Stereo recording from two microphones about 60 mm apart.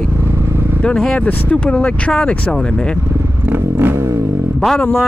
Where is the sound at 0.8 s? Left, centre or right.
Centre.